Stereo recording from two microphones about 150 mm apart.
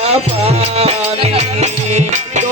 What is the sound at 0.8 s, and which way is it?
Music, 40° right (ahead or behind).